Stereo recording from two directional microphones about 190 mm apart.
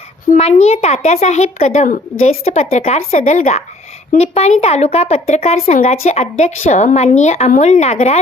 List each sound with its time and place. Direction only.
0.3 s speech: 35° left (ahead or behind)